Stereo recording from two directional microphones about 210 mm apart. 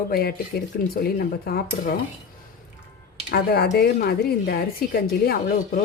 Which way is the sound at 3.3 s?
50° left (ahead or behind).